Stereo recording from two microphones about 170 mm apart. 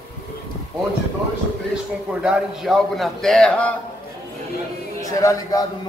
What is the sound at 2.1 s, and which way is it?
A man's voice, 5° right (ahead or behind).